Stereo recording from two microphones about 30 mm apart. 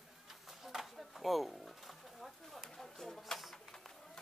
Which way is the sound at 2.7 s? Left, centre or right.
Centre.